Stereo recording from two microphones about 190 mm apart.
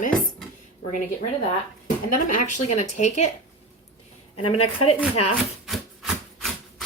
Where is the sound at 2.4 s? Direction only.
40° left (ahead or behind).